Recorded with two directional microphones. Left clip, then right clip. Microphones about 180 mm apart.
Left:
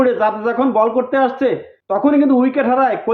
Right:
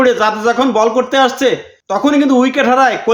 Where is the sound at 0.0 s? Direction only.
15° right (ahead or behind).